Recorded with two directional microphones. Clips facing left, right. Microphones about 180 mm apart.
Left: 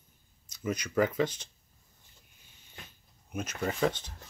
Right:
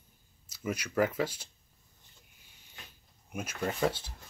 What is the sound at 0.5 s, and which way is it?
Speech, 5° right (ahead or behind).